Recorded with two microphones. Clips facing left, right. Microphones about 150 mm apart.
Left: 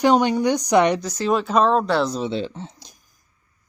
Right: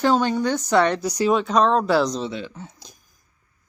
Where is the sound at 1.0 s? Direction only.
10° right (ahead or behind).